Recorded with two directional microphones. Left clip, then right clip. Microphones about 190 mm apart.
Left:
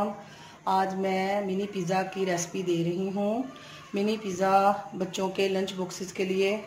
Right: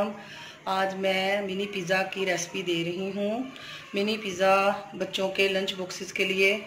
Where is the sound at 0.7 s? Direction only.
45° left (ahead or behind).